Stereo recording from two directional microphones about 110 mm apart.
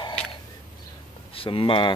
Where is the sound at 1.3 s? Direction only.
55° left (ahead or behind).